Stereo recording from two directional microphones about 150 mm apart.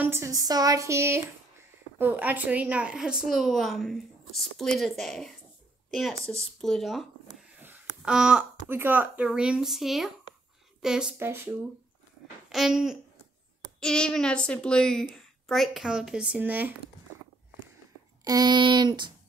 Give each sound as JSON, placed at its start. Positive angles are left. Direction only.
{"t": 0.0, "sound": "a woman's voice", "side_deg": -15}
{"t": 11.1, "sound": "speech", "side_deg": -15}
{"t": 12.4, "sound": "babbling", "side_deg": 0}
{"t": 13.7, "sound": "a woman's voice", "side_deg": 5}
{"t": 18.2, "sound": "speech", "side_deg": -25}